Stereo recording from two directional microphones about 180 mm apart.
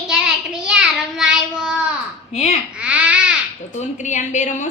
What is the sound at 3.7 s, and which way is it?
Speech, 40° left (ahead or behind).